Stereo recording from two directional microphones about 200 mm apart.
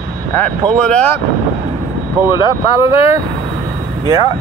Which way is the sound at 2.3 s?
25° left (ahead or behind).